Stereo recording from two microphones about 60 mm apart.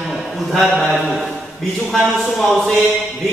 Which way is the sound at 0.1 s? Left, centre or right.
Centre.